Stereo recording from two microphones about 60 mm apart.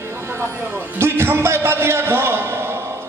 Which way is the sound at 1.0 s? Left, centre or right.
Right.